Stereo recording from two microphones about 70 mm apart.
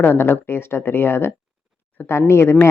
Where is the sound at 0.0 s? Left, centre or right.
Left.